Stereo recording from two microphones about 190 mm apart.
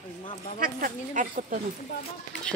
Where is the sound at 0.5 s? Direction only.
45° right (ahead or behind).